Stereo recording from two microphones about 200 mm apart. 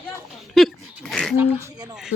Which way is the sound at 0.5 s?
Centre (ahead or behind).